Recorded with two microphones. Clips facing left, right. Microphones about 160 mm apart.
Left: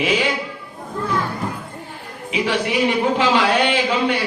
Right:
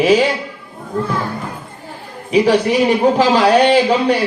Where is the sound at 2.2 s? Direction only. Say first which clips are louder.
Right 8 dB; 40° right (ahead or behind).